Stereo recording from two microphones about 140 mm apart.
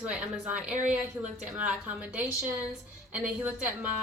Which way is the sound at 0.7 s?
60° right (ahead or behind).